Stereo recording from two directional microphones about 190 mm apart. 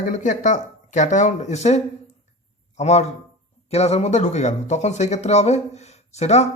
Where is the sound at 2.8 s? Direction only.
35° left (ahead or behind).